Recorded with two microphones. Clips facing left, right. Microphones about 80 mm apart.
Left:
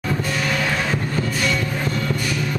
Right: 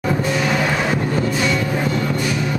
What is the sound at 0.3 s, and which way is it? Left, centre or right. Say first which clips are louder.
Music: right 4 dB; centre.